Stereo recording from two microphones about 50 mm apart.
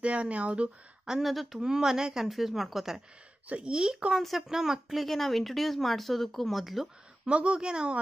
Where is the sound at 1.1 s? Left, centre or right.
Centre.